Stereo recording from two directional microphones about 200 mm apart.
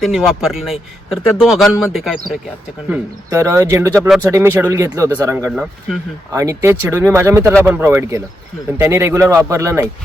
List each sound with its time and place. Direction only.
0.0 s speech: centre (ahead or behind)
2.9 s speech: 15° right (ahead or behind)
5.5 s speech: 5° right (ahead or behind)
6.3 s speech: 15° right (ahead or behind)